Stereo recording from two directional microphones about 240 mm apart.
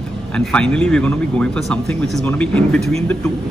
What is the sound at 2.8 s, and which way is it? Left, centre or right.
Speech, right.